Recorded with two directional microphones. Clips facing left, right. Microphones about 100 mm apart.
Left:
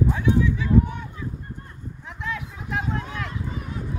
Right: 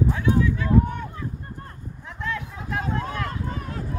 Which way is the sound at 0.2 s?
10° left (ahead or behind).